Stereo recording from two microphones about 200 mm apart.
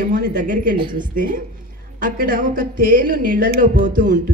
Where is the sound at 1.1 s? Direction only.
45° right (ahead or behind).